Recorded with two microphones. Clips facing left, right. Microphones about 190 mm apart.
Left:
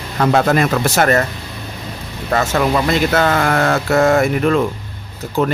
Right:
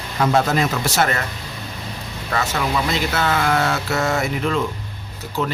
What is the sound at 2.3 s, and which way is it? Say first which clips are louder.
Speech: left 7 dB; 45° left (ahead or behind).